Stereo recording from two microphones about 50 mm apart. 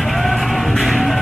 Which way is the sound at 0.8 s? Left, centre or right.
Centre.